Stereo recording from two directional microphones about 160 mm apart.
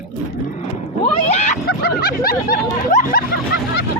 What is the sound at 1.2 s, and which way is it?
Speech, 45° left (ahead or behind).